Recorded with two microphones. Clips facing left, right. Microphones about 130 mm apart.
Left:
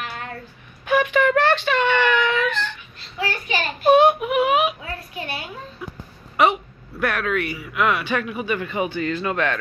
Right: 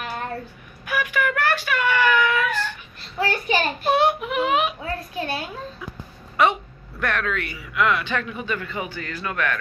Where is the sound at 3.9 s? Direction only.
15° left (ahead or behind).